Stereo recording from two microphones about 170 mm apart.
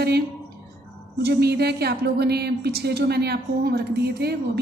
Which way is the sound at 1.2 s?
75° right (ahead or behind).